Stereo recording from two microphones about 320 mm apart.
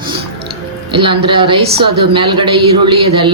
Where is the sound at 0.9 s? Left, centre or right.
Centre.